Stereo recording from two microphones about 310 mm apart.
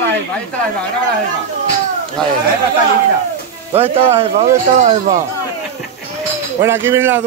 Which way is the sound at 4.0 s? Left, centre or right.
Centre.